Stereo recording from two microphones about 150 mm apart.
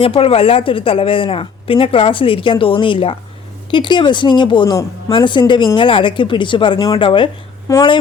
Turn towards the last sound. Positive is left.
turn(degrees=20)  # may be behind; listen again after turning